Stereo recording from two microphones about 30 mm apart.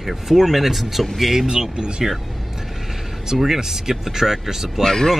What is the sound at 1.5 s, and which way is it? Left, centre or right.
Speech, right.